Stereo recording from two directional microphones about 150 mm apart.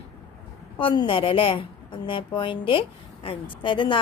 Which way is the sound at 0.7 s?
35° left (ahead or behind).